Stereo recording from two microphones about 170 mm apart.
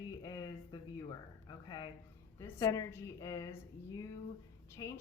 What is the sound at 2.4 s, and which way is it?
A woman's voice, 20° left (ahead or behind).